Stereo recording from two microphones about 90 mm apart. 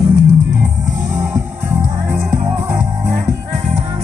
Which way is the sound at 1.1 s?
30° right (ahead or behind).